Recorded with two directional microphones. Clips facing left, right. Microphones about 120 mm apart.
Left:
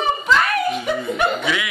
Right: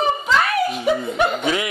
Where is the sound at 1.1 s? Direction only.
40° right (ahead or behind).